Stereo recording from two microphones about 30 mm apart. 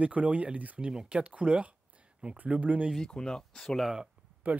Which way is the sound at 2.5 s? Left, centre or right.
Right.